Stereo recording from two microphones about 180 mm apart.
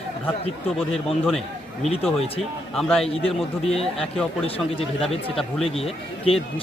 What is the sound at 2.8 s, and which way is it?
Speech, 5° left (ahead or behind).